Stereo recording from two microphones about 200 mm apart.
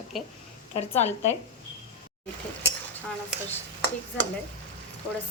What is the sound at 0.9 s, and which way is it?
Speech, 35° left (ahead or behind).